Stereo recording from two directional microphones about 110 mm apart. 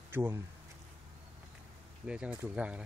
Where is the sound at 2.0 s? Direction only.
10° right (ahead or behind).